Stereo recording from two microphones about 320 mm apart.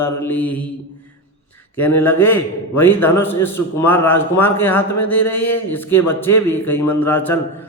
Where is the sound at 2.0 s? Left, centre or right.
Centre.